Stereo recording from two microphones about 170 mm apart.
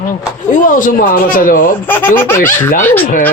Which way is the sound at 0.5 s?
50° left (ahead or behind).